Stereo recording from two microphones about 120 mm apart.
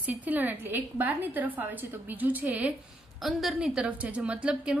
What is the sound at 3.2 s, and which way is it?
A woman's voice, centre (ahead or behind).